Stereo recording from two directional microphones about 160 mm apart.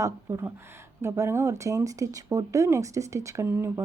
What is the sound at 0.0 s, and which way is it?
Speech, 20° right (ahead or behind).